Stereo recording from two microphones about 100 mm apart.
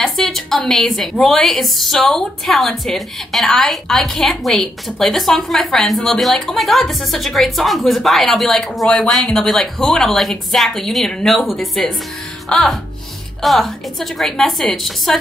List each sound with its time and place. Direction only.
0.0 s a sound: 5° left (ahead or behind)
1.2 s a woman's voice: 5° left (ahead or behind)
12.4 s music: 5° left (ahead or behind)
13.4 s a woman's voice: centre (ahead or behind)